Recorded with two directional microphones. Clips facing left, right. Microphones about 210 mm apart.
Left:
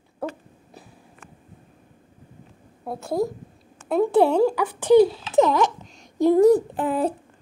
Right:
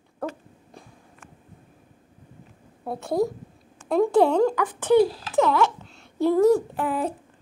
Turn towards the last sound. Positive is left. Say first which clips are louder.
# left 3 dB
turn(degrees=25)  # may be behind; listen again after turning